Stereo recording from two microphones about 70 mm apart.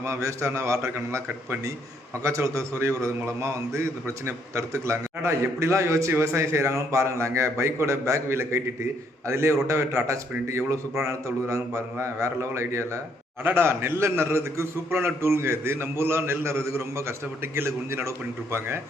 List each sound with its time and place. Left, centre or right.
0.0 s a man's voice: right